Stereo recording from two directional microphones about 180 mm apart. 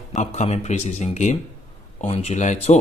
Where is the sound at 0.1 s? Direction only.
40° left (ahead or behind).